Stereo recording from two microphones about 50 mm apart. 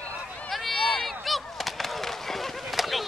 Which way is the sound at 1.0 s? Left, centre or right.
Centre.